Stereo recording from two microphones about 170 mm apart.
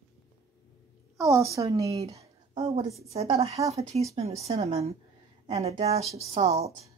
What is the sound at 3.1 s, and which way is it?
A woman's voice, 40° right (ahead or behind).